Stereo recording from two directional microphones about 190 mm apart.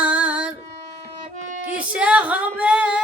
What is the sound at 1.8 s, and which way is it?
Female singing, 5° right (ahead or behind).